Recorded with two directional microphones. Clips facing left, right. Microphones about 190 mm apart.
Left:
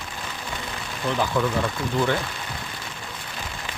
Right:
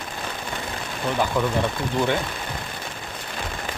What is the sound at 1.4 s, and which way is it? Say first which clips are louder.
Speech: left 1 dB; 10° right (ahead or behind).